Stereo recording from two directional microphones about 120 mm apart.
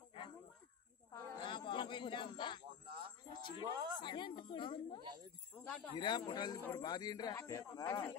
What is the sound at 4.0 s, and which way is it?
A woman's voice, 40° left (ahead or behind).